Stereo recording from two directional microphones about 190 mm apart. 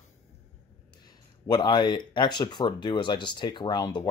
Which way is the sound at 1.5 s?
25° left (ahead or behind).